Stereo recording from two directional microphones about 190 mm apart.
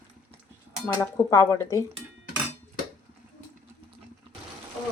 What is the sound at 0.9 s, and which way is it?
Speech, 15° left (ahead or behind).